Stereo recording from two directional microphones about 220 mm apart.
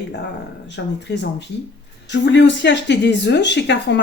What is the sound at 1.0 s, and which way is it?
Speech, 50° left (ahead or behind).